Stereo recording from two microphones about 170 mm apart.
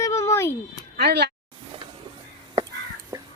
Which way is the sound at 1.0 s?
75° right (ahead or behind).